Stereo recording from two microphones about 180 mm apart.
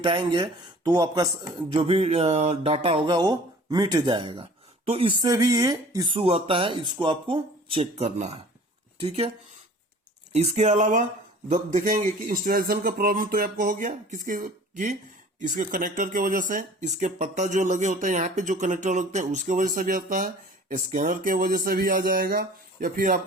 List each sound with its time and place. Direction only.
0.0 s speech: 25° right (ahead or behind)
5.2 s speech: 20° right (ahead or behind)
10.3 s speech: 35° right (ahead or behind)